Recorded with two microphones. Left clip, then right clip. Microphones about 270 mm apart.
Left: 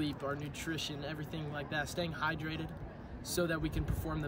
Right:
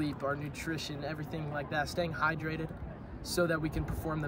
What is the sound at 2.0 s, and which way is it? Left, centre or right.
Speech, left.